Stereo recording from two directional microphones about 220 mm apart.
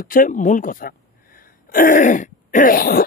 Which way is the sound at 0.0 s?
40° left (ahead or behind).